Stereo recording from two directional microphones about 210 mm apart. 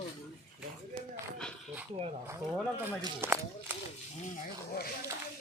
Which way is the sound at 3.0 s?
10° right (ahead or behind).